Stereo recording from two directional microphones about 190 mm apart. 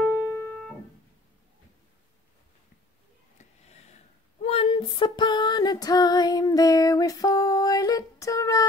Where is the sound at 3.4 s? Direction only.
35° left (ahead or behind).